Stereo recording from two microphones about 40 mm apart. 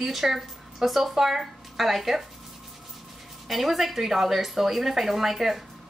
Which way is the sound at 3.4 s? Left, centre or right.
Centre.